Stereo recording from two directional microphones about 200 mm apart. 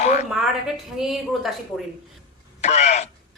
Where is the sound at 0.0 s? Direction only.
35° left (ahead or behind).